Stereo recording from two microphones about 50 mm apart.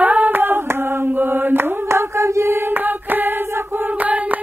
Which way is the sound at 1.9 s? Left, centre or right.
Right.